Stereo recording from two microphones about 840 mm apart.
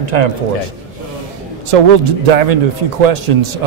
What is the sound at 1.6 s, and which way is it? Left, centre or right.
Speech, right.